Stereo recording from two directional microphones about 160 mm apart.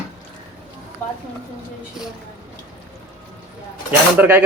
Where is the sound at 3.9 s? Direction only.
15° right (ahead or behind).